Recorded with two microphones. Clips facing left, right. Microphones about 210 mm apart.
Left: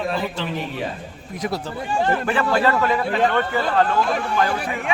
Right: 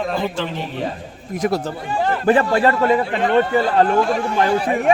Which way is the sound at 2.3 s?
35° right (ahead or behind).